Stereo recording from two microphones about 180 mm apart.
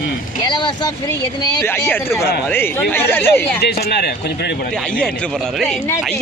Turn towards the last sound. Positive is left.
turn(degrees=65)  # may be behind; listen again after turning